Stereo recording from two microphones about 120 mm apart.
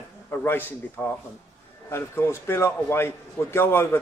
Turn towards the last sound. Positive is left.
turn(degrees=20)  # may be behind; listen again after turning